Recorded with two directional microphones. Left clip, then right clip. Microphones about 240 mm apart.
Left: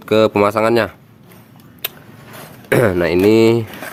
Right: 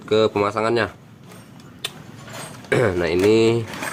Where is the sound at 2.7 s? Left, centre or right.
Left.